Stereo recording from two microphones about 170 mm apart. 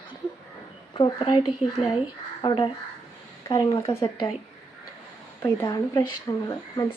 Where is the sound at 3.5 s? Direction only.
20° left (ahead or behind).